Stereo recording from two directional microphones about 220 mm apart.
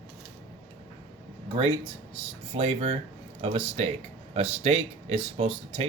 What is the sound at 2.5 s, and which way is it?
Speech, 25° right (ahead or behind).